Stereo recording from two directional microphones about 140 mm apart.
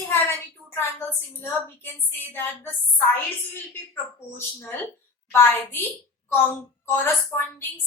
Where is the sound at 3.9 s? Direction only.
15° left (ahead or behind).